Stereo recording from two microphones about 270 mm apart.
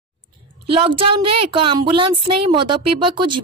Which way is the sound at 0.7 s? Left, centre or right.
Centre.